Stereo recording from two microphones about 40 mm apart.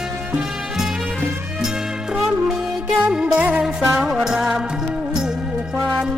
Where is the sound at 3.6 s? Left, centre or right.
Centre.